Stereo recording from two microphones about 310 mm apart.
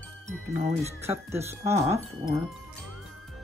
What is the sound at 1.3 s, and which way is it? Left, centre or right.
Speech, centre.